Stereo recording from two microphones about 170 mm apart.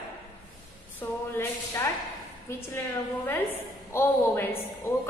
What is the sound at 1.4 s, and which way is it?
Speech, 15° left (ahead or behind).